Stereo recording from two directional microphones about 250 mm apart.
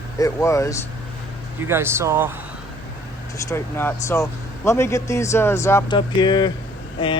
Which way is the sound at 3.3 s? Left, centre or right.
Centre.